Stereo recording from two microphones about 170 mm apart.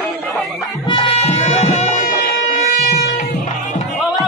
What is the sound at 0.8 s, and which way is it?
Music, 30° left (ahead or behind).